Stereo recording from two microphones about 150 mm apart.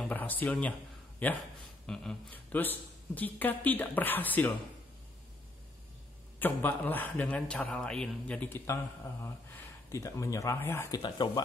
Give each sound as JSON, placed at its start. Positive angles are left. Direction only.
{"t": 0.0, "sound": "speech", "side_deg": 10}
{"t": 6.4, "sound": "speech", "side_deg": 10}
{"t": 9.8, "sound": "speech", "side_deg": 20}
{"t": 10.9, "sound": "speech", "side_deg": 30}